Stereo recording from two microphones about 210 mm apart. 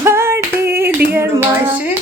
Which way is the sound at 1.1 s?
10° right (ahead or behind).